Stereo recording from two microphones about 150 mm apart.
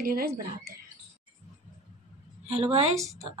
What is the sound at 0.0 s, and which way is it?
Speech, 90° right.